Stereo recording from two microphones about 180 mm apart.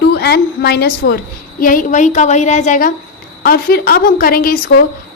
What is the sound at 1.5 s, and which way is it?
A woman's voice, 50° left (ahead or behind).